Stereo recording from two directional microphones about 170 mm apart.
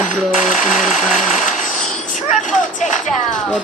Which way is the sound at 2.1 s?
45° left (ahead or behind).